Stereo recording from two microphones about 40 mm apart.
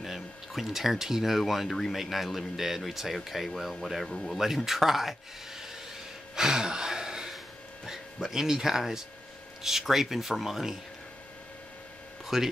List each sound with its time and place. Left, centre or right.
0.0 s a man's voice: centre
4.6 s a man's voice: centre
6.3 s gasp: centre
7.8 s speech: centre
12.3 s speech: centre